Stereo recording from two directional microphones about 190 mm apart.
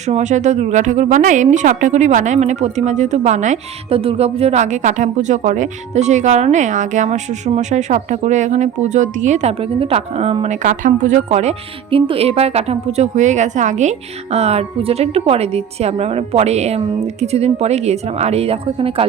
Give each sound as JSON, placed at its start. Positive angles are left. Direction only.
{"t": 0.1, "sound": "a woman's voice", "side_deg": -40}